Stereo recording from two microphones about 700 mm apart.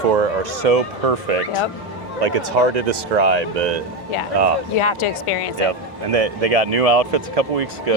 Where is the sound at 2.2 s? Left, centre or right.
Right.